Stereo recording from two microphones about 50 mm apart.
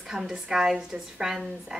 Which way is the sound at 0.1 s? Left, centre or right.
Centre.